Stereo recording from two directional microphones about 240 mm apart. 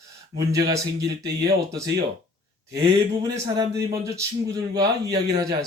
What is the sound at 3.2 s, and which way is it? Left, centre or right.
Speech, centre.